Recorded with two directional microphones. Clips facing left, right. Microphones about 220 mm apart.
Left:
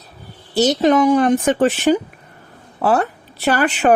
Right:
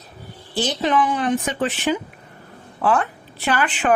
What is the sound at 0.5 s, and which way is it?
Speech, 40° left (ahead or behind).